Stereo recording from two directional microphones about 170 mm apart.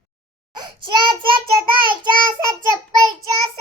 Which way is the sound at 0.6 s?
30° right (ahead or behind).